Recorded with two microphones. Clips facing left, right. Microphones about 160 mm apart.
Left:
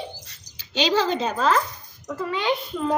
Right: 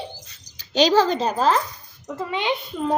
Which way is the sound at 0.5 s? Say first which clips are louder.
Right 5 dB; 40° right (ahead or behind).